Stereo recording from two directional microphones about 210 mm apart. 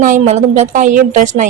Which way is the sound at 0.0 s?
35° right (ahead or behind).